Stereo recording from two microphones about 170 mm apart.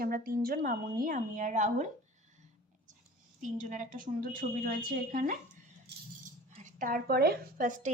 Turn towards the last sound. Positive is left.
turn(degrees=-50)  # may be behind; listen again after turning